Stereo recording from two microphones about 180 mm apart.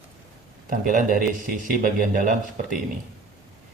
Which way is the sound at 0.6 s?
50° right (ahead or behind).